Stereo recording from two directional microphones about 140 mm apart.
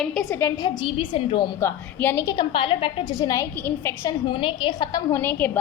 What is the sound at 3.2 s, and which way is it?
Speech, 25° left (ahead or behind).